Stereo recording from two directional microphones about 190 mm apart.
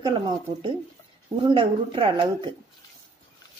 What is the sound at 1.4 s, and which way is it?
Speech, 25° right (ahead or behind).